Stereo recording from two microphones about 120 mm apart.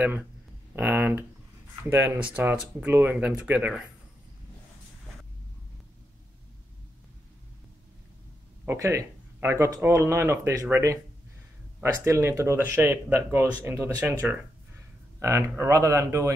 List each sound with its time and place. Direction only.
0.7 s speech: 15° right (ahead or behind)
8.6 s speech: 25° right (ahead or behind)